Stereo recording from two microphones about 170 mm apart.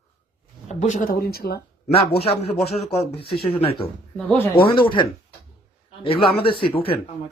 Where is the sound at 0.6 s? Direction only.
45° left (ahead or behind); by 1.6 s 65° left (ahead or behind).